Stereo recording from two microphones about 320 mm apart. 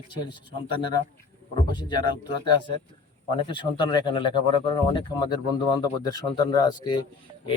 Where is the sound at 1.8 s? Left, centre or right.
Centre.